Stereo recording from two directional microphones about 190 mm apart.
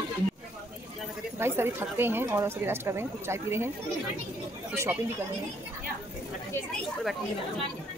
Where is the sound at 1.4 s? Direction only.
10° right (ahead or behind).